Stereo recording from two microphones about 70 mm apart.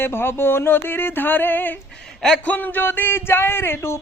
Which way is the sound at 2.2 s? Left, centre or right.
Centre.